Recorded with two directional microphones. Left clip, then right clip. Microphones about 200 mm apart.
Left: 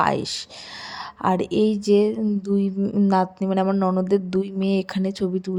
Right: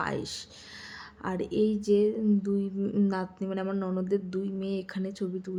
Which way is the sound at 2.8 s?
20° left (ahead or behind).